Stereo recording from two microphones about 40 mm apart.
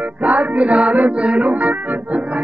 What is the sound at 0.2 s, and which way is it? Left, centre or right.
Music, right.